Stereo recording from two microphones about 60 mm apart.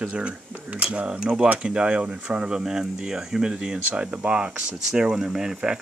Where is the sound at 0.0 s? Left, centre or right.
Centre.